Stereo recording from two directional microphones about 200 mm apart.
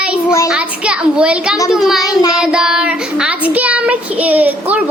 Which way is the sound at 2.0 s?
20° left (ahead or behind).